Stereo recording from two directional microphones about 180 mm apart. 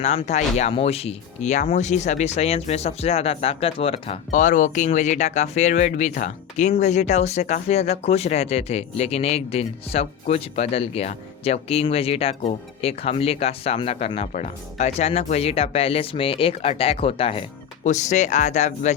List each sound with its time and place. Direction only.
0.0 s speech: 35° left (ahead or behind)
4.3 s speech: 45° left (ahead or behind)